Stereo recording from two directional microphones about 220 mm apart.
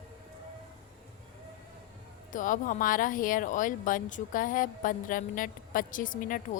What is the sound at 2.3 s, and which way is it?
Speech, 35° left (ahead or behind).